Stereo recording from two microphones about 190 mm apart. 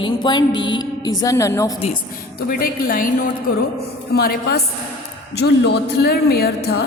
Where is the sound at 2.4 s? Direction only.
50° left (ahead or behind).